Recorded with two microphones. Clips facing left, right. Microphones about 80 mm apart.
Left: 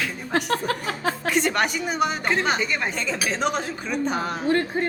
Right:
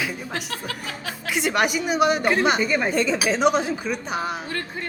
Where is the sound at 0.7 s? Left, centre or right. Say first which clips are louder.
Left 7 dB; left.